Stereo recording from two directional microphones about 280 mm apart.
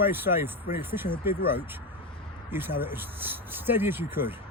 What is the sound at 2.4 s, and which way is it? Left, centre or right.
Speech, centre.